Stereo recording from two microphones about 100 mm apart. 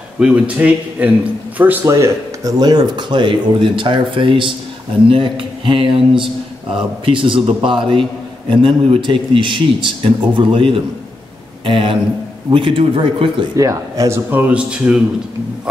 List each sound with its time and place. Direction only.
0.2 s a man's voice: 10° right (ahead or behind)
1.9 s speech: 30° right (ahead or behind)
2.6 s speech: 45° right (ahead or behind)
13.6 s speech: 30° right (ahead or behind); by 15.0 s 10° right (ahead or behind)